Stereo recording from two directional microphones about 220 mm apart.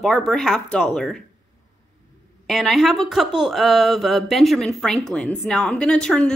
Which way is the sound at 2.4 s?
Centre (ahead or behind).